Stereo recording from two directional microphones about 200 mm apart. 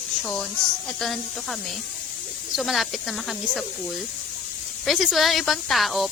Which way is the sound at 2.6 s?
Centre (ahead or behind).